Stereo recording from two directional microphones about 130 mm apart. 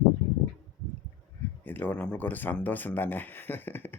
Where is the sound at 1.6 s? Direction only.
15° left (ahead or behind).